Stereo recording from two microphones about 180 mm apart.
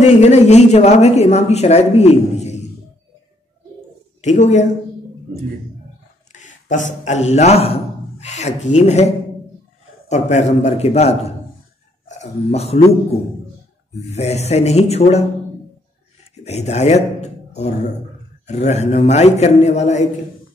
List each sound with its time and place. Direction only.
0.0 s speech: 40° left (ahead or behind)
4.2 s speech: 40° left (ahead or behind)
6.3 s a man's voice: 45° left (ahead or behind)
14.1 s speech: 35° left (ahead or behind)
16.4 s speech: 35° left (ahead or behind)